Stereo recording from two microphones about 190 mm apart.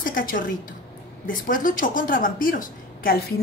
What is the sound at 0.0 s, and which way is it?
A woman's voice, 45° left (ahead or behind).